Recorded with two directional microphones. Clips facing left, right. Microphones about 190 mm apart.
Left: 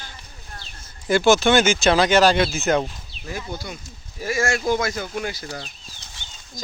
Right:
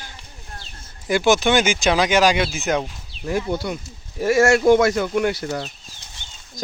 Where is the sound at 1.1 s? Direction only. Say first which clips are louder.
Left 1 dB; 15° right (ahead or behind).